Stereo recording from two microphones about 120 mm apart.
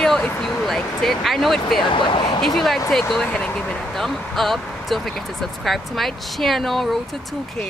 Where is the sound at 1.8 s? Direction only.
40° left (ahead or behind).